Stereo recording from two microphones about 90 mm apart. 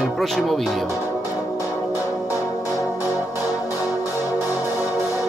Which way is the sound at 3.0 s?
20° right (ahead or behind).